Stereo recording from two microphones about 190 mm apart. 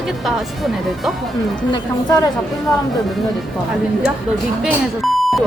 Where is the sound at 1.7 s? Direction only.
20° left (ahead or behind).